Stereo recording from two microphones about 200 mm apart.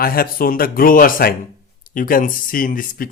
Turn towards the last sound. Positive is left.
turn(degrees=45)  # may be behind; listen again after turning